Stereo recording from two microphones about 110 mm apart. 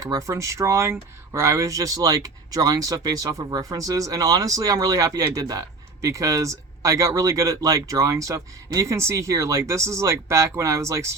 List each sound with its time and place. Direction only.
0.0 s speech: 30° right (ahead or behind)